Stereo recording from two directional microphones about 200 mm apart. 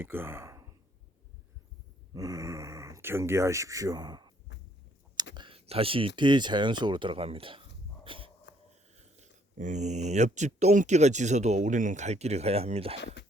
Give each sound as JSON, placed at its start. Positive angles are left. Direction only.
{"t": 0.0, "sound": "a sound", "side_deg": -10}
{"t": 2.1, "sound": "speech", "side_deg": -15}
{"t": 5.3, "sound": "speech", "side_deg": -25}
{"t": 8.0, "sound": "snort", "side_deg": -25}
{"t": 9.0, "sound": "speech", "side_deg": -35}